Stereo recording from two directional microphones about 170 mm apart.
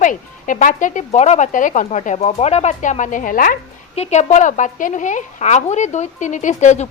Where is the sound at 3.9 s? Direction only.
40° left (ahead or behind).